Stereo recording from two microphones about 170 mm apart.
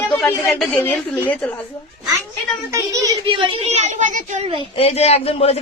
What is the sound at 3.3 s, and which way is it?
A woman's voice, 30° right (ahead or behind).